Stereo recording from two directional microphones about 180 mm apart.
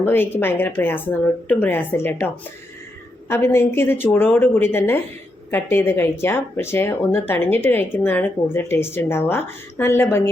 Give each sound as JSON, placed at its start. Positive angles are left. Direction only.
{"t": 0.0, "sound": "speech", "side_deg": 10}